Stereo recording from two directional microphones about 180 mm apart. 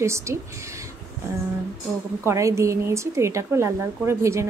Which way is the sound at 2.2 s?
15° right (ahead or behind).